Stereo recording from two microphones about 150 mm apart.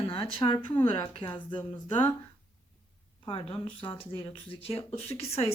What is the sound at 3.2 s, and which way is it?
Speech, 35° left (ahead or behind).